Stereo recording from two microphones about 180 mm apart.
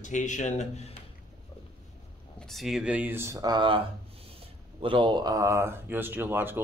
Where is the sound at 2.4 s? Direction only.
Centre (ahead or behind); by 3.8 s 25° right (ahead or behind).